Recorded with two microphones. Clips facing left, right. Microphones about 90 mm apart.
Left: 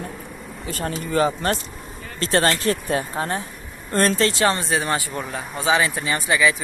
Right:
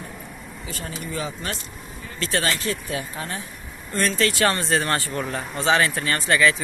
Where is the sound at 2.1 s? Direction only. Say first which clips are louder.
Left 5 dB; 40° left (ahead or behind).